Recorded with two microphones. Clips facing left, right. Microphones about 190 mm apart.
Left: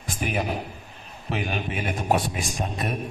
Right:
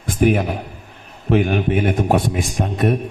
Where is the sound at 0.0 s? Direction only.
55° right (ahead or behind).